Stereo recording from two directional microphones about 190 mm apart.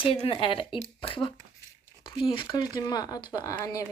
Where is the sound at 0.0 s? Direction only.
30° left (ahead or behind).